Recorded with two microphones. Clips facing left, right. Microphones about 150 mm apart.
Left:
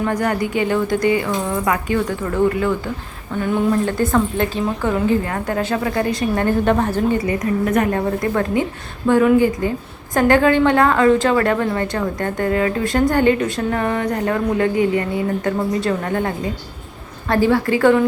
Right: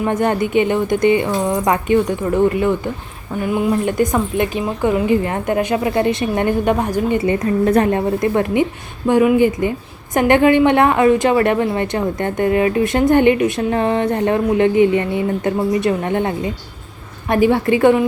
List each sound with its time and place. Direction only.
0.0 s a woman's voice: 25° right (ahead or behind)
7.2 s a woman's voice: 30° right (ahead or behind)
7.9 s a woman's voice: 20° right (ahead or behind)